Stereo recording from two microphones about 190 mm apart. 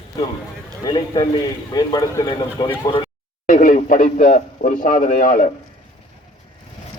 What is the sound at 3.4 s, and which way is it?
Speech, 40° left (ahead or behind).